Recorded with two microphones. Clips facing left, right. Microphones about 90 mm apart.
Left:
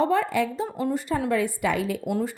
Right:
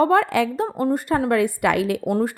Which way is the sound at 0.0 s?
65° right (ahead or behind).